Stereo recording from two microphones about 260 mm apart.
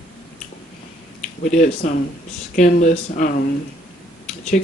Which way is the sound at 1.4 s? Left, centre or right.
Left.